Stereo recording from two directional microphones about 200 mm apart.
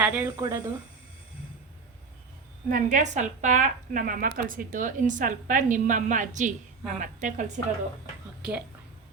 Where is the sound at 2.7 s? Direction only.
40° right (ahead or behind).